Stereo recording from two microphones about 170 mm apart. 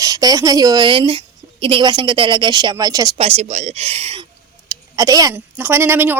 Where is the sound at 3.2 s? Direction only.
40° right (ahead or behind).